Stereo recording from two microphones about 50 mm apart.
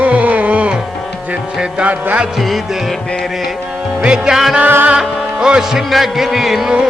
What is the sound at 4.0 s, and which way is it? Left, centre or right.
Music, centre.